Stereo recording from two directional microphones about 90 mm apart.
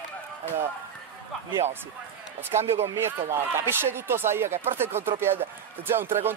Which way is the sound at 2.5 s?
30° right (ahead or behind).